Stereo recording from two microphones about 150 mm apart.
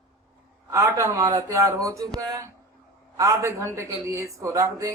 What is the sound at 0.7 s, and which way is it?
A man's voice, 20° right (ahead or behind).